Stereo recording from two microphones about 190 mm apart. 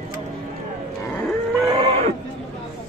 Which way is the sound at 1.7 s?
30° right (ahead or behind).